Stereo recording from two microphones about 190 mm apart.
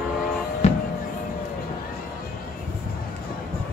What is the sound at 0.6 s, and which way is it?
Music, 35° left (ahead or behind).